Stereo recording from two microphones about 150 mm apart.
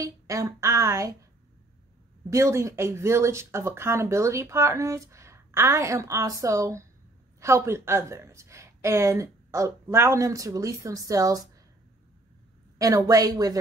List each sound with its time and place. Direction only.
0.0 s speech: 20° right (ahead or behind)
2.2 s speech: 20° right (ahead or behind)
12.7 s speech: 25° right (ahead or behind)